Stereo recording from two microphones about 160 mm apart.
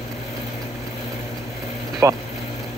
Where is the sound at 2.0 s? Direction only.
15° right (ahead or behind).